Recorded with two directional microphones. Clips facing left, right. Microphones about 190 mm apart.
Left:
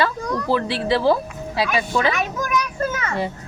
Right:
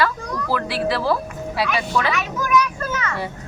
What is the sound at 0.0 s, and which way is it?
Speech, 25° left (ahead or behind).